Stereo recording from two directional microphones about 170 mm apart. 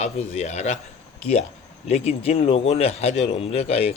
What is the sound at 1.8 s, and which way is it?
Speech, 40° left (ahead or behind).